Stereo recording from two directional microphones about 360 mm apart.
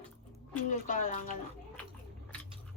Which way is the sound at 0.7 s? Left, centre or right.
Left.